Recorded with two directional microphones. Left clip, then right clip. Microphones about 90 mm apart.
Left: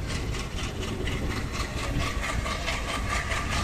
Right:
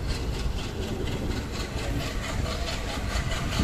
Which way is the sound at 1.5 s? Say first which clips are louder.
Left 1 dB; 15° right (ahead or behind).